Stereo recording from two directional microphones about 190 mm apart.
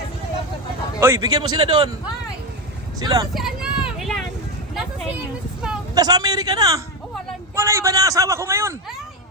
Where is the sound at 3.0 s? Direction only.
20° right (ahead or behind).